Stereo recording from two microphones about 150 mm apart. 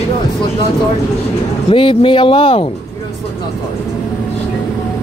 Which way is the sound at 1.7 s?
35° left (ahead or behind).